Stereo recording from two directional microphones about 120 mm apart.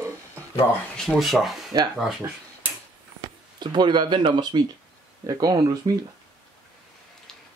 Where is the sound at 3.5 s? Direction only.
40° right (ahead or behind).